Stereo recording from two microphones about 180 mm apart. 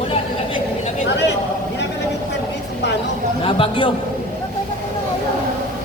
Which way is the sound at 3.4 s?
30° left (ahead or behind).